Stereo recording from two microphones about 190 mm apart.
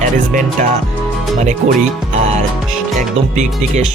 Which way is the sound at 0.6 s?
40° right (ahead or behind).